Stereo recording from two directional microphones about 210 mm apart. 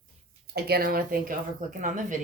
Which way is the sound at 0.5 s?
50° right (ahead or behind).